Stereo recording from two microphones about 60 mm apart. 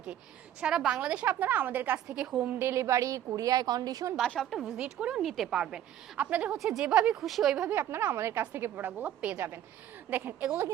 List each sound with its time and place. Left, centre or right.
0.6 s a woman's voice: centre; by 2.0 s right
2.0 s a woman's voice: centre
2.6 s a woman's voice: right
4.4 s speech: centre
4.8 s speech: centre
5.2 s speech: centre
5.5 s speech: centre
6.1 s a woman's voice: right
7.2 s speech: centre
7.7 s a woman's voice: right
9.0 s a woman's voice: right